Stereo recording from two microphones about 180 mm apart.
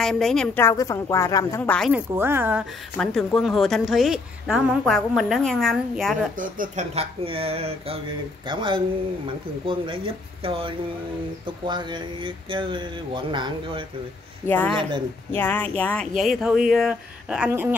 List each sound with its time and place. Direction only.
0.0 s a woman's voice: centre (ahead or behind)
1.9 s speech: 10° right (ahead or behind)
3.0 s a woman's voice: 5° left (ahead or behind)
6.3 s speech: 50° right (ahead or behind); by 13.8 s 25° right (ahead or behind)
14.4 s a woman's voice: 10° left (ahead or behind); by 17.7 s 10° right (ahead or behind)